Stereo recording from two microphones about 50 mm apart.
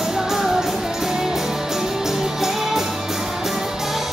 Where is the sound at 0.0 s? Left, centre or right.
Centre.